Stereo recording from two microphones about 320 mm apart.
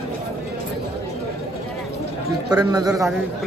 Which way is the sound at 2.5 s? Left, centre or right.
Centre.